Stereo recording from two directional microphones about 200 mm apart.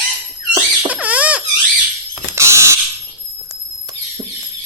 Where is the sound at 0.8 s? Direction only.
5° right (ahead or behind).